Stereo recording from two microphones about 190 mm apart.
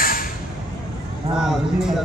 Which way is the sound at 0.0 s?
50° left (ahead or behind).